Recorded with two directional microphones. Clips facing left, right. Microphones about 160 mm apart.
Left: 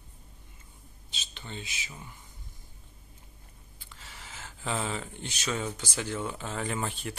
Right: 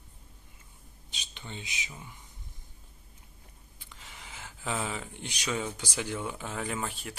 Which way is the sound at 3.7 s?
15° right (ahead or behind).